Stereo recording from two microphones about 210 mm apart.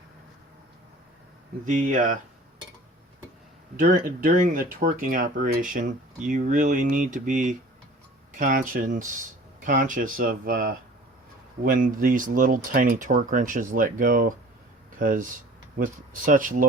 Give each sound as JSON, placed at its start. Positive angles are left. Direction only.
{"t": 1.6, "sound": "speech", "side_deg": -35}
{"t": 3.8, "sound": "speech", "side_deg": -40}